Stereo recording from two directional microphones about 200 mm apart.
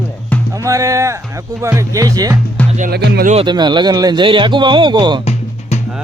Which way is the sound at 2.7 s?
40° right (ahead or behind).